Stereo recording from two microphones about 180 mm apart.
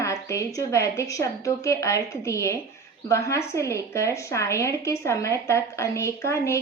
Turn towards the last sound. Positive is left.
turn(degrees=15)  # may be behind; listen again after turning